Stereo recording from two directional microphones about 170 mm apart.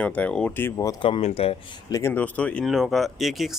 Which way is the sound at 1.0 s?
35° left (ahead or behind).